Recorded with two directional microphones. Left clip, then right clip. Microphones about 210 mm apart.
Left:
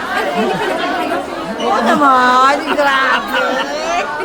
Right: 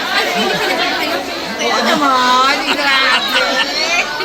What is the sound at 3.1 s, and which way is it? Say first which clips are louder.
Chatter: right 1 dB; 15° left (ahead or behind).